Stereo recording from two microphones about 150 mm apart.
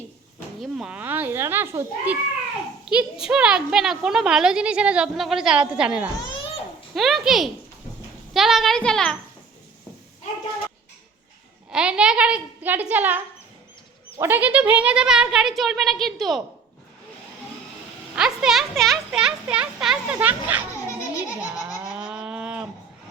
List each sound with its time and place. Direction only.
0.6 s a child's voice: 5° right (ahead or behind)
11.7 s a child's voice: 5° right (ahead or behind)
18.1 s speech: 5° right (ahead or behind)
21.0 s giggle: 20° left (ahead or behind)
21.5 s a sound: 5° right (ahead or behind)